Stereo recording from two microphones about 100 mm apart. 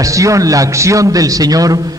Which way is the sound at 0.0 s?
30° right (ahead or behind).